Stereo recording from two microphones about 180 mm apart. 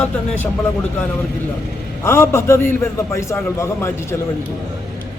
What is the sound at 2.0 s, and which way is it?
A man's voice, 15° left (ahead or behind).